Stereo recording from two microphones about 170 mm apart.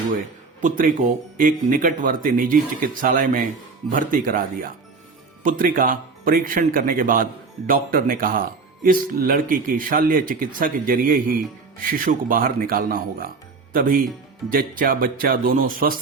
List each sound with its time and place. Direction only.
0.6 s speech: 55° right (ahead or behind)